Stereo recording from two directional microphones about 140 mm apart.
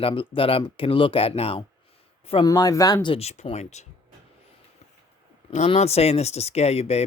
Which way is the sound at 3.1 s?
50° left (ahead or behind).